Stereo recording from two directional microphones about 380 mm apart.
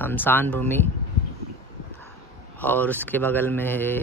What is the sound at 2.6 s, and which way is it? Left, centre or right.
Speech, centre.